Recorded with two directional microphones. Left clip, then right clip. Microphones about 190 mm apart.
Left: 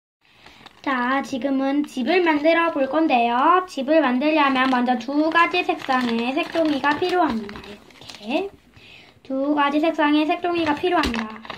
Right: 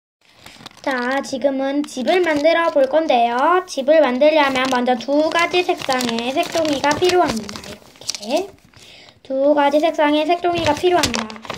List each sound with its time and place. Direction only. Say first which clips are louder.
0.8 s speech: right 2 dB; 35° right (ahead or behind)
9.6 s speech: right 4 dB; 40° right (ahead or behind); by 11.5 s 60° right (ahead or behind)